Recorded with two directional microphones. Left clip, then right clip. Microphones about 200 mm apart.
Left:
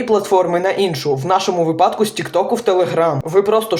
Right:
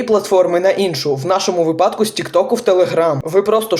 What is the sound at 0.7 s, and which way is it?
A man's voice, centre (ahead or behind).